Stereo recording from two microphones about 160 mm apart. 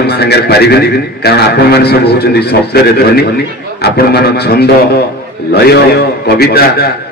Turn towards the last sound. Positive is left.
turn(degrees=75)  # may be behind; listen again after turning